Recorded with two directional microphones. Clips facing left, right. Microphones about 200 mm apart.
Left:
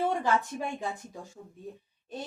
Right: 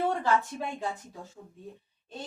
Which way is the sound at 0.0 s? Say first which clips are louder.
Even; 15° left (ahead or behind).